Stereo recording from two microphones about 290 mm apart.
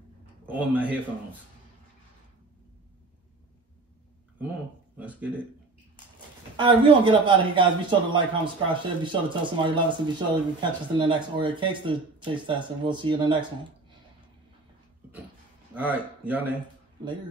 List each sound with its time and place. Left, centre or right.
0.5 s speech: centre
4.9 s speech: centre
6.5 s speech: centre
15.7 s speech: centre